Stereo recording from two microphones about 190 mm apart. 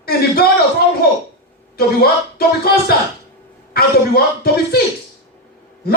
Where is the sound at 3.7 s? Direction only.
55° left (ahead or behind).